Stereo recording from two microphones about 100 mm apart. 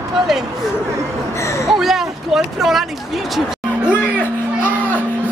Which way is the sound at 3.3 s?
10° right (ahead or behind).